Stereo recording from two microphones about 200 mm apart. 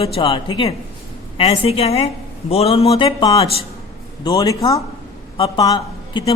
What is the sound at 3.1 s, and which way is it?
A man's voice, 20° left (ahead or behind).